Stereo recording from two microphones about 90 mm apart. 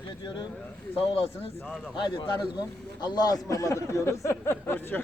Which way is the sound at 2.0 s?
60° left (ahead or behind).